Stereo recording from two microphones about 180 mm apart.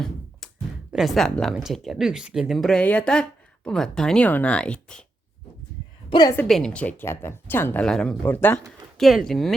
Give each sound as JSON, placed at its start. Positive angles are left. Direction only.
{"t": 0.0, "sound": "a sound", "side_deg": 0}
{"t": 0.9, "sound": "speech", "side_deg": 0}
{"t": 6.1, "sound": "a woman's voice", "side_deg": 25}
{"t": 6.3, "sound": "speech", "side_deg": 5}
{"t": 9.0, "sound": "speech", "side_deg": 0}